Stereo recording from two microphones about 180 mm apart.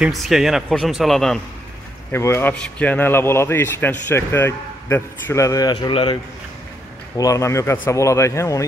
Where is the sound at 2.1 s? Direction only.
15° left (ahead or behind).